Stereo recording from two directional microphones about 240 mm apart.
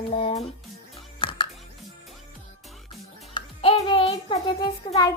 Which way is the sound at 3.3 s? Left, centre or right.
Left.